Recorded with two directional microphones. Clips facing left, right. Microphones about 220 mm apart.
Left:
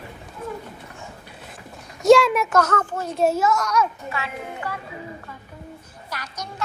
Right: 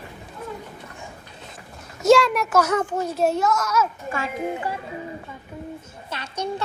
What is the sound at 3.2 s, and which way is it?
Speech, centre (ahead or behind).